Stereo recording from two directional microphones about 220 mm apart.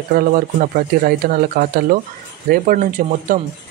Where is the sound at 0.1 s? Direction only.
40° right (ahead or behind).